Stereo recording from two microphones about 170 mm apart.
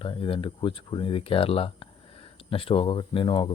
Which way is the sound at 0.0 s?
30° left (ahead or behind).